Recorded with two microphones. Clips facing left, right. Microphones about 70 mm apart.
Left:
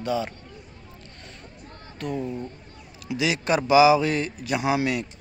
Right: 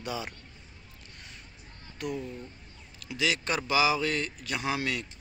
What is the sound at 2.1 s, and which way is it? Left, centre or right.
Speech, left.